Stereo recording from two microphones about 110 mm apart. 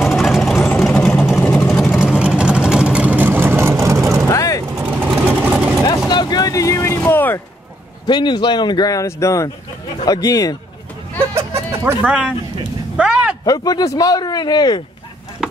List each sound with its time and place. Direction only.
0.0 s vehicle: centre (ahead or behind); by 4.2 s 25° right (ahead or behind)
4.3 s vehicle: 30° left (ahead or behind)
4.6 s vehicle: 10° right (ahead or behind)
5.9 s vehicle: 40° left (ahead or behind)
7.1 s a sound: 20° left (ahead or behind)
8.1 s speech: 45° left (ahead or behind)
11.3 s a sound: 20° right (ahead or behind)
12.1 s speech: 10° right (ahead or behind)
12.9 s a sound: 10° right (ahead or behind)
13.5 s speech: 35° left (ahead or behind)